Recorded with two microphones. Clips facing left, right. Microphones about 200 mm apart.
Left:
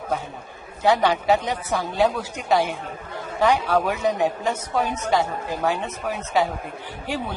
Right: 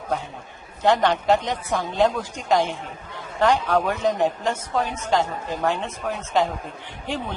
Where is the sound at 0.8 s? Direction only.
5° left (ahead or behind).